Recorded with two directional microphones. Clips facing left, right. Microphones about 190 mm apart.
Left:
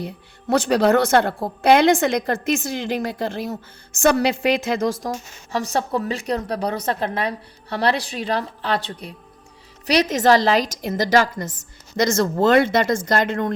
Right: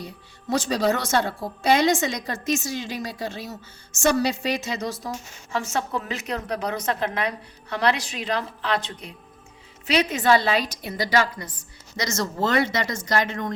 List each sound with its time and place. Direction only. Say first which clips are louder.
0.5 s a woman's voice: left 6 dB; 60° left (ahead or behind)
5.0 s a woman's voice: left 5 dB; 40° left (ahead or behind); by 13.5 s 55° left (ahead or behind)